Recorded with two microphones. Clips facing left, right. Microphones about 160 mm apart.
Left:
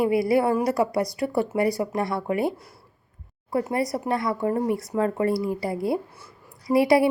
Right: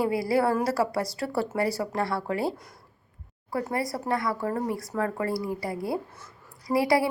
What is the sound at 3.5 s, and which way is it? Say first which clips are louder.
A woman's voice: left 4 dB; 25° left (ahead or behind).